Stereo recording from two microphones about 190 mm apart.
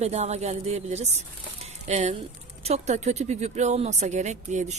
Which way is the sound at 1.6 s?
35° right (ahead or behind).